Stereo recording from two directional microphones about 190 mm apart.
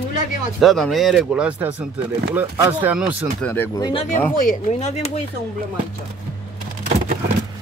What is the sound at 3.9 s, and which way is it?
Speech, 35° left (ahead or behind).